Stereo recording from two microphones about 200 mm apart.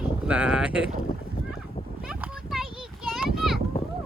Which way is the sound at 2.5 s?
Centre (ahead or behind).